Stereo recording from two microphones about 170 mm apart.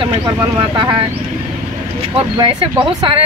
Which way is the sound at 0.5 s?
30° right (ahead or behind).